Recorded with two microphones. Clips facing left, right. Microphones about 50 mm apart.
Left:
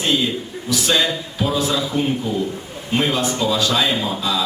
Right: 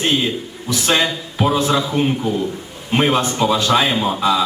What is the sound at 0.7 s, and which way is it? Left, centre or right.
A man's voice, right.